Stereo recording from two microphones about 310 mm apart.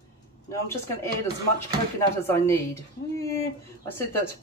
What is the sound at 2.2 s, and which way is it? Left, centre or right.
Speech, centre.